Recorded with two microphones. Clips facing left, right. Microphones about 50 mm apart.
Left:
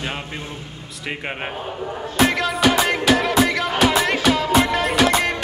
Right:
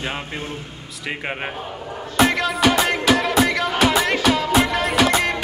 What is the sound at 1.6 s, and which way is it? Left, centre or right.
Speech, centre.